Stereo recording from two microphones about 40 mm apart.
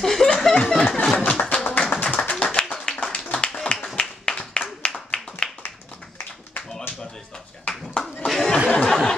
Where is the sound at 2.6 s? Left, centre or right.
Left.